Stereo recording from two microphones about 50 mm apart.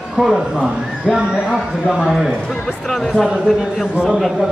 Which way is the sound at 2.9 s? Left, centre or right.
Centre.